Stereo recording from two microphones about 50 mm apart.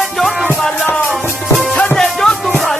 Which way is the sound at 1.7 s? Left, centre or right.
Centre.